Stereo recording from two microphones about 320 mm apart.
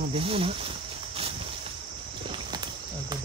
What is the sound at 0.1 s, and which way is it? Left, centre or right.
Speech, centre.